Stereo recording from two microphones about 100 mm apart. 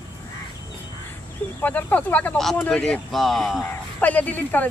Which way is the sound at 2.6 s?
10° left (ahead or behind).